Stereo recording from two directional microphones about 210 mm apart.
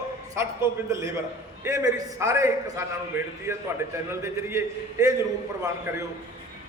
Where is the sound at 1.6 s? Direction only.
15° right (ahead or behind).